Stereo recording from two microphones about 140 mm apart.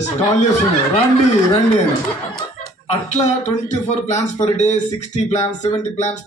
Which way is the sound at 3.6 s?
55° left (ahead or behind).